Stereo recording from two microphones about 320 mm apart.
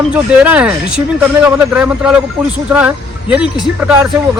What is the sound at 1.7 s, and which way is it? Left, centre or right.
Speech, centre.